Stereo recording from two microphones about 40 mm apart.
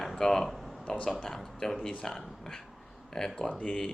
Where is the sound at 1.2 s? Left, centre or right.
Centre.